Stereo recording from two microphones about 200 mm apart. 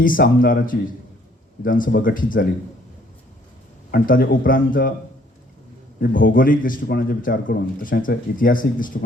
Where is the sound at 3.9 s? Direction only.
45° left (ahead or behind).